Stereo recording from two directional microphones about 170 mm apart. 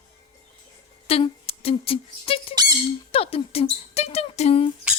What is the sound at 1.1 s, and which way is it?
Speech, 35° left (ahead or behind).